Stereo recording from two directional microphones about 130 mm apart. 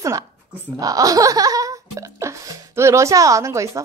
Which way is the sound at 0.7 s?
25° right (ahead or behind).